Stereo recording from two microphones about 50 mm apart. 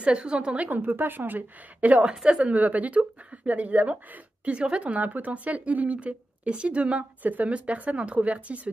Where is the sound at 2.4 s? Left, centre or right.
Right.